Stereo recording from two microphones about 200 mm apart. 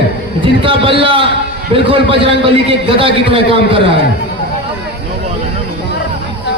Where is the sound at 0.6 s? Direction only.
25° right (ahead or behind).